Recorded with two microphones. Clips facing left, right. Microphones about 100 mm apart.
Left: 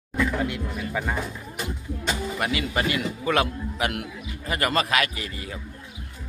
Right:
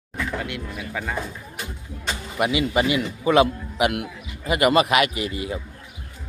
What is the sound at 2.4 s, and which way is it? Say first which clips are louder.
A man's voice: right 8 dB; 15° right (ahead or behind).